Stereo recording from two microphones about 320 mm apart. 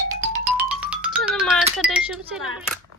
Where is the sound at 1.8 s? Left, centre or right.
Centre.